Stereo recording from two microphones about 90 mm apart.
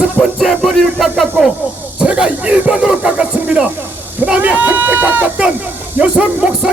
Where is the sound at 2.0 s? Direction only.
10° right (ahead or behind).